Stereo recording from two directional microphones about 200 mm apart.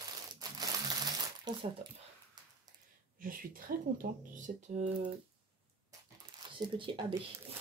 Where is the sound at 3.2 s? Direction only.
45° right (ahead or behind).